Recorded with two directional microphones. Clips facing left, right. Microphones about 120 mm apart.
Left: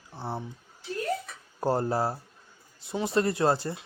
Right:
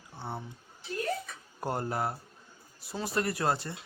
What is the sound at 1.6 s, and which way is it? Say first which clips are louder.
Speech: left 6 dB; 30° left (ahead or behind).